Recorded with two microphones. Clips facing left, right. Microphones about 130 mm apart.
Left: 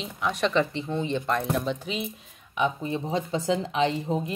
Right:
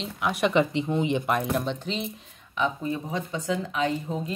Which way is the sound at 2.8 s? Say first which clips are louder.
Left 2 dB; 25° left (ahead or behind).